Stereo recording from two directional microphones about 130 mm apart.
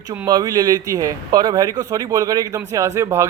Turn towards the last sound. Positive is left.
turn(degrees=-20)  # may be behind; listen again after turning